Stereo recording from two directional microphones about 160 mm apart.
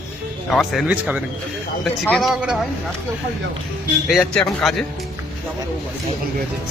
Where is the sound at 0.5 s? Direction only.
Centre (ahead or behind).